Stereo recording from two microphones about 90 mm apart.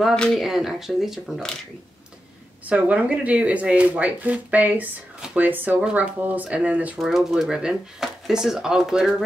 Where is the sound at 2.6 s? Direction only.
15° right (ahead or behind).